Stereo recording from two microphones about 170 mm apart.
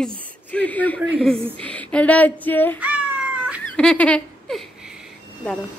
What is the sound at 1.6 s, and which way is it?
Speech, 5° left (ahead or behind).